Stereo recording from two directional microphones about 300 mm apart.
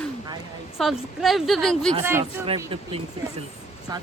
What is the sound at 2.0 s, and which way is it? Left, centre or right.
Speech, centre.